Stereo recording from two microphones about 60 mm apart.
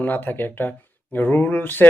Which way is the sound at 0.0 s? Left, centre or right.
Left.